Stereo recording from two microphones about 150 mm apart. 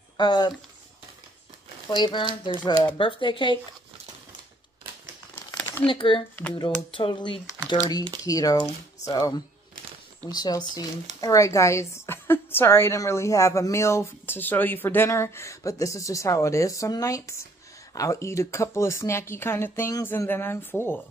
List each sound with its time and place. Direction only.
0.2 s a woman's voice: 30° left (ahead or behind)
1.9 s speech: 30° left (ahead or behind)
5.6 s a sound: 10° left (ahead or behind)
5.9 s a woman's voice: 35° left (ahead or behind); by 21.0 s 15° left (ahead or behind)